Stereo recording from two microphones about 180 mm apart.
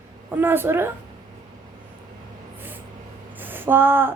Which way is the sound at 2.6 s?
10° right (ahead or behind).